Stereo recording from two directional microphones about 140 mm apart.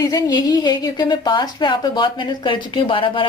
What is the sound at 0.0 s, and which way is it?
A woman's voice, 30° left (ahead or behind).